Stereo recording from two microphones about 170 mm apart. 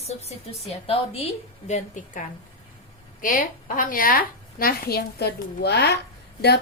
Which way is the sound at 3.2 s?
50° left (ahead or behind).